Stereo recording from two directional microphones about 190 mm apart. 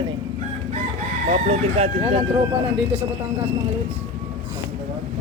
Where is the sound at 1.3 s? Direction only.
35° right (ahead or behind).